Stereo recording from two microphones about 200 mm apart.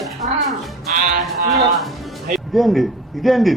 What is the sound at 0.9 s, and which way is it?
Music, 40° right (ahead or behind).